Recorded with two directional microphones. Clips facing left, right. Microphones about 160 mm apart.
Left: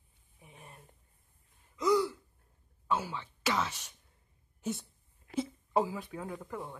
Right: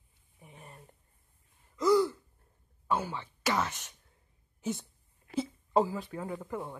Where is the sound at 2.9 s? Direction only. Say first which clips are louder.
Right 1 dB; 15° right (ahead or behind).